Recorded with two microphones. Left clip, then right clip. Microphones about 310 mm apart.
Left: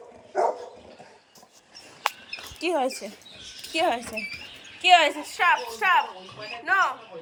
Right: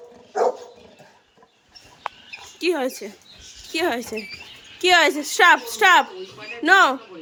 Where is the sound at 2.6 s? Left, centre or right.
Centre.